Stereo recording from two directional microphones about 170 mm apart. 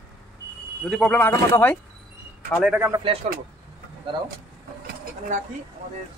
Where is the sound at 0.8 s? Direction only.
5° left (ahead or behind).